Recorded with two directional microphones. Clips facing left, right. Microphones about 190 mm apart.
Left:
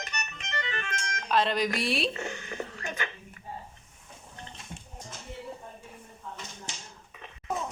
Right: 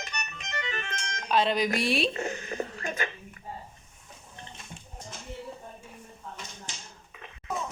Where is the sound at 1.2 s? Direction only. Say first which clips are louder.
Right 1 dB; centre (ahead or behind).